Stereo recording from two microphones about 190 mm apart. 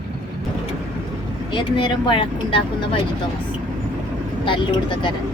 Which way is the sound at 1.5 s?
25° left (ahead or behind).